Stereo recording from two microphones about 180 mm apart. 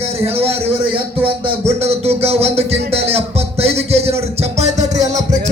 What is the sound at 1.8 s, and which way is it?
A man's voice, 35° right (ahead or behind).